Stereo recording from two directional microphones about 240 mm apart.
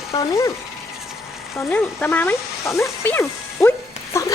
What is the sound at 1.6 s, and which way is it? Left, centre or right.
Speech, centre.